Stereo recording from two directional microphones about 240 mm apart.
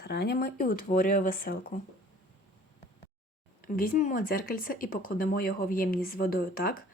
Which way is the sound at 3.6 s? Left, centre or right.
Left.